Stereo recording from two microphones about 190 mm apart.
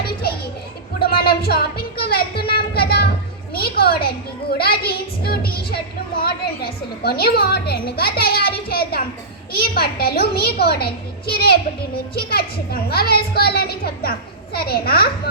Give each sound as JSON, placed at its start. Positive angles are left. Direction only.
{"t": 0.0, "sound": "children playing", "side_deg": 55}
{"t": 0.9, "sound": "a sound", "side_deg": 55}
{"t": 3.5, "sound": "a child's voice", "side_deg": 55}